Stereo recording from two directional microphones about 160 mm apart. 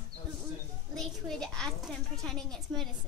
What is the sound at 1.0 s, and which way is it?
A woman's voice, 5° left (ahead or behind).